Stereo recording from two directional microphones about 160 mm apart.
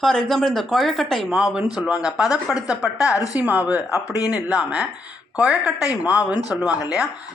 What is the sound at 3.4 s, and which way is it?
Speech, 10° right (ahead or behind).